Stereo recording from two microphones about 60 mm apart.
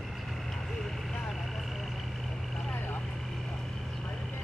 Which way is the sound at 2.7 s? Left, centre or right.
Left.